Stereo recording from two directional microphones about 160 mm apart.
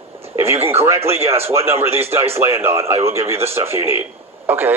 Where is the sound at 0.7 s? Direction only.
15° right (ahead or behind).